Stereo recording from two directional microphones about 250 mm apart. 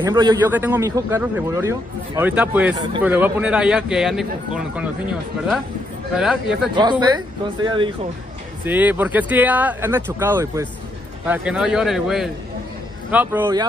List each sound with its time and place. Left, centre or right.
0.0 s a man's voice: centre
6.1 s a man's voice: centre
6.7 s a man's voice: centre
8.6 s a man's voice: centre